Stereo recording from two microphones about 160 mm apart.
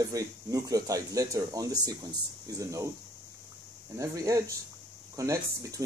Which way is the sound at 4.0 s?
20° right (ahead or behind).